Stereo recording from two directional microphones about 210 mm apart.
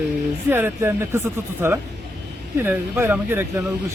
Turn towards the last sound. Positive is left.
turn(degrees=-10)  # may be behind; listen again after turning